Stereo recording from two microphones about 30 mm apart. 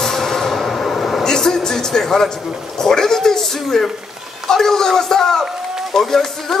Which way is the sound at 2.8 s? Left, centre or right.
Centre.